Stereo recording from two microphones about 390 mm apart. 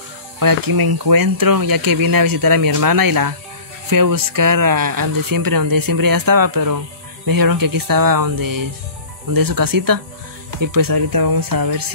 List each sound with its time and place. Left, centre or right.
0.4 s speech: right